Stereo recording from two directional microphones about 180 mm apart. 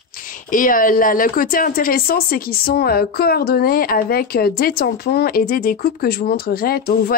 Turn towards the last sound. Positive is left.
turn(degrees=55)  # may be behind; listen again after turning